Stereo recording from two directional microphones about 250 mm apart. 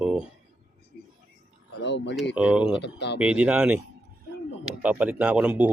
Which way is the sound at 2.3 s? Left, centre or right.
Centre.